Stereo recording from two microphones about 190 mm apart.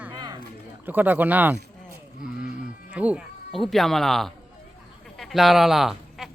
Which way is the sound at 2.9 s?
5° right (ahead or behind).